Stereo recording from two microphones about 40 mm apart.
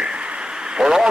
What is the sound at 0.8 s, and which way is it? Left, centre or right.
Speech, centre.